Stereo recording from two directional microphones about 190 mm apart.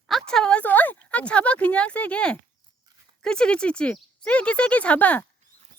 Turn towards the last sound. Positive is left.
turn(degrees=5)  # may be behind; listen again after turning